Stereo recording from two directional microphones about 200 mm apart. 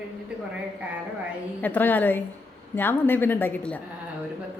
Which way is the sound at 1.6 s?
10° left (ahead or behind).